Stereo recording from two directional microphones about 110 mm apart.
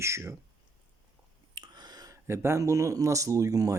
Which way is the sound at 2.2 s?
25° right (ahead or behind).